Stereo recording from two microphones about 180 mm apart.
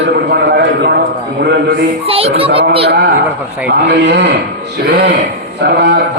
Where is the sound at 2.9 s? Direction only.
65° right (ahead or behind).